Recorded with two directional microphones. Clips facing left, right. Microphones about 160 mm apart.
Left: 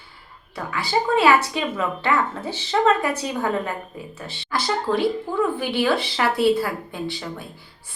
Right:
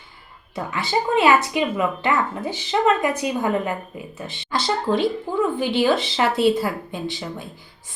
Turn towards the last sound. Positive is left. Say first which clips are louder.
# right 1 dB
turn(degrees=-20)  # may be behind; listen again after turning